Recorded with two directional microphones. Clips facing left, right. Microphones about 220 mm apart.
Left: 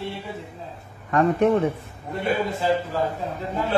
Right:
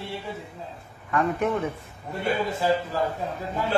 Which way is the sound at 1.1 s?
40° left (ahead or behind).